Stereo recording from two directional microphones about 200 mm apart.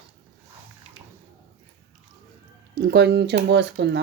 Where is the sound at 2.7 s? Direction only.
55° right (ahead or behind).